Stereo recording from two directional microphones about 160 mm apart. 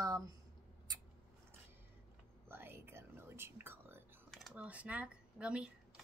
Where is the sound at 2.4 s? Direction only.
15° right (ahead or behind).